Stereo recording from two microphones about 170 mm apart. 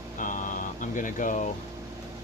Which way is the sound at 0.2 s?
50° left (ahead or behind).